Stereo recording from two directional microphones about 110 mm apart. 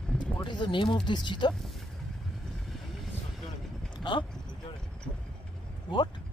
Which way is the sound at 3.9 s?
45° left (ahead or behind).